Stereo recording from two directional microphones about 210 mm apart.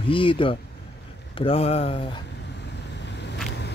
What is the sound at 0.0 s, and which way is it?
Speech, 25° left (ahead or behind).